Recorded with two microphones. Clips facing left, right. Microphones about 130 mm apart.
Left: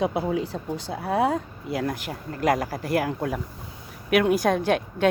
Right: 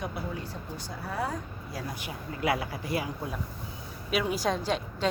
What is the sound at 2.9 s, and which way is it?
A woman's voice, 75° left (ahead or behind).